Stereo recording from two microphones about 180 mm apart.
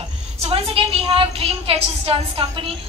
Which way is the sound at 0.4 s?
35° right (ahead or behind).